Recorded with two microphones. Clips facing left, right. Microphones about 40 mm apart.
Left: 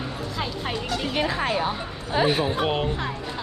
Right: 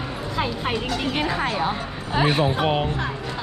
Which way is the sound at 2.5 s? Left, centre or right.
Centre.